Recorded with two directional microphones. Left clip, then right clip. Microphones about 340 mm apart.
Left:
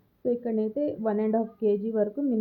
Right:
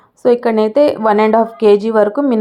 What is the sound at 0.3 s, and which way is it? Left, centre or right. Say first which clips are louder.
Speech: right 16 dB; centre.